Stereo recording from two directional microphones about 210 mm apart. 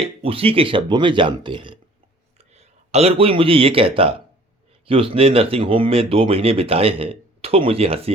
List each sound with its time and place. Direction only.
0.0 s speech: 25° right (ahead or behind)